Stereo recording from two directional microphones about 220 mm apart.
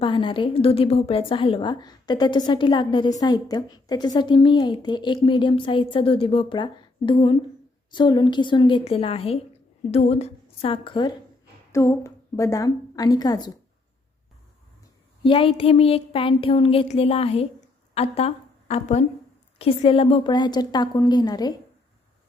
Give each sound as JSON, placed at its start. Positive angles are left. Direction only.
{"t": 0.0, "sound": "a woman's voice", "side_deg": 20}
{"t": 15.2, "sound": "a woman's voice", "side_deg": 25}